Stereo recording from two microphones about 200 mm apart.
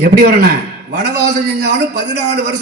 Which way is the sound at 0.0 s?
50° right (ahead or behind).